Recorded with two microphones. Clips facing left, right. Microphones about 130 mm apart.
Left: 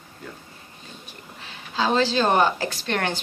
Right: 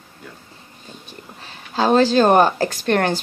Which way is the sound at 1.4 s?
45° right (ahead or behind).